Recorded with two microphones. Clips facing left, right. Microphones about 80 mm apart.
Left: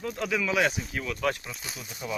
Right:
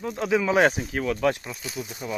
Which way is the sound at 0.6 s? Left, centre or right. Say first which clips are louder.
Right 6 dB; right.